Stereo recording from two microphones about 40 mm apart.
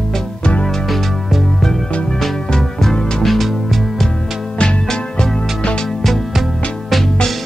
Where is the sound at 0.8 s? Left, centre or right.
Centre.